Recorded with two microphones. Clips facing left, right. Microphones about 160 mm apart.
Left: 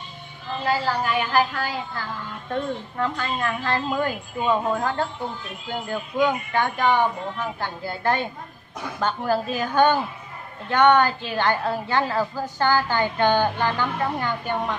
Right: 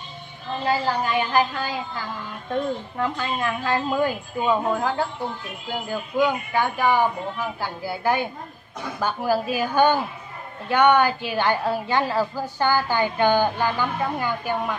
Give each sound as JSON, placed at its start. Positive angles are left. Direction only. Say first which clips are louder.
{"t": 0.7, "sound": "a woman's voice", "louder": "even", "side_deg": -20}